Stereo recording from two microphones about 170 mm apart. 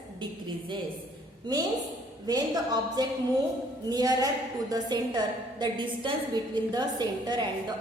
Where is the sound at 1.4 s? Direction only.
25° right (ahead or behind).